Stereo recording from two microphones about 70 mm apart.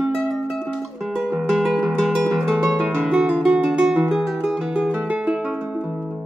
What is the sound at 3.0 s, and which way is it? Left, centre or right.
Music, centre.